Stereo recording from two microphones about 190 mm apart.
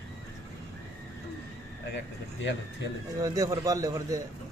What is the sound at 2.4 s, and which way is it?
Speech, 70° left (ahead or behind).